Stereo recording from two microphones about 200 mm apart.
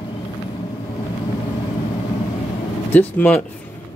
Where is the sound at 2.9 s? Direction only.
10° left (ahead or behind).